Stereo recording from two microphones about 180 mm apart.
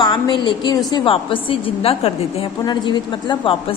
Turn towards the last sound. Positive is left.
turn(degrees=25)  # may be behind; listen again after turning